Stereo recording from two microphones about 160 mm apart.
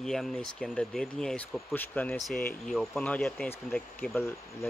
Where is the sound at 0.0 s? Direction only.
Centre (ahead or behind).